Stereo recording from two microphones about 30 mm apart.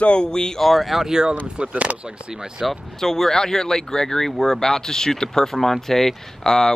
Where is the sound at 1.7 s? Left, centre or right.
Right.